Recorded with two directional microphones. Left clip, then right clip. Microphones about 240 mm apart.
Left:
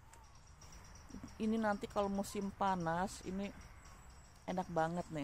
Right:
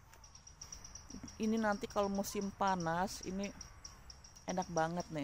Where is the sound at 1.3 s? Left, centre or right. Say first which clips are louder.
Right 1 dB; centre.